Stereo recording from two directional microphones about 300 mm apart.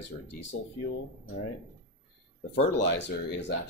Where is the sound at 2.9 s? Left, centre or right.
Left.